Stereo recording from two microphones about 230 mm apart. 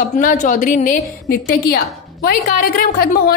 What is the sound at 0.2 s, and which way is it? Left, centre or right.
A woman's voice, left.